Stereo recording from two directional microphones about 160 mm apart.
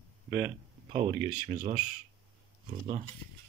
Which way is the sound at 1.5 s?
50° right (ahead or behind).